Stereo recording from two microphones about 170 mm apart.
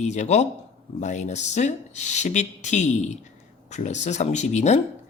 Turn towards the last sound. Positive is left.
turn(degrees=40)  # may be behind; listen again after turning